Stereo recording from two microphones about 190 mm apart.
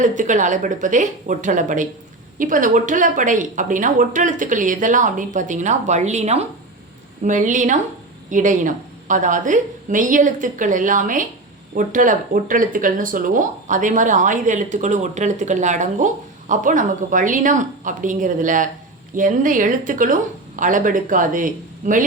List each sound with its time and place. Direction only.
0.0 s speech: 40° right (ahead or behind)